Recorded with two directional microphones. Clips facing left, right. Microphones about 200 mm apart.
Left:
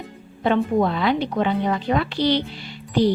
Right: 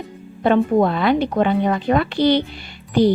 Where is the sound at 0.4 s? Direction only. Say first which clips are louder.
Right 4 dB; 50° right (ahead or behind).